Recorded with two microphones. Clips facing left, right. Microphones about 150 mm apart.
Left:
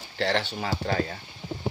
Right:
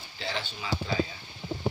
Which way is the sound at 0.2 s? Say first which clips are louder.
Left 9 dB; 75° left (ahead or behind).